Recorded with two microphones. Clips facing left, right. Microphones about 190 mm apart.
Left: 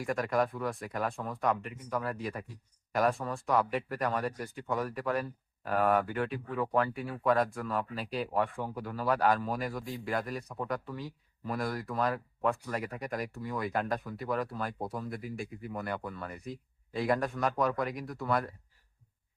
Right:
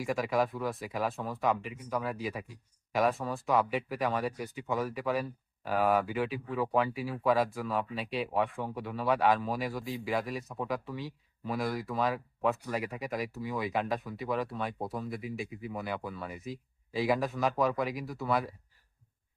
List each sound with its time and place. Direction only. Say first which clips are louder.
0.0 s speech: even; centre (ahead or behind)